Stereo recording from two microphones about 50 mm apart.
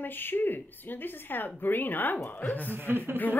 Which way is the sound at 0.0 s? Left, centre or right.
Left.